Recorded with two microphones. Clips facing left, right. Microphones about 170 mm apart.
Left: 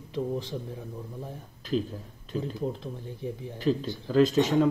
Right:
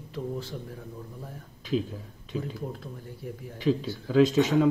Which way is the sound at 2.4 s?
20° left (ahead or behind).